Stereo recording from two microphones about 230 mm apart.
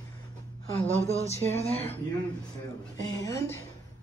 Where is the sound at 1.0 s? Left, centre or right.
Left.